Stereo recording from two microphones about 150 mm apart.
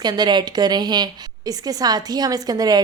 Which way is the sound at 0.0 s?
30° right (ahead or behind).